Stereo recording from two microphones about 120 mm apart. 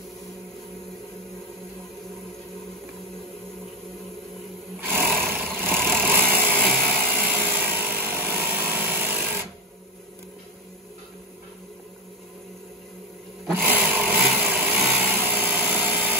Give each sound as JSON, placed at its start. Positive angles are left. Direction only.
{"t": 4.7, "sound": "sewing machine", "side_deg": -20}
{"t": 13.7, "sound": "vehicle", "side_deg": -15}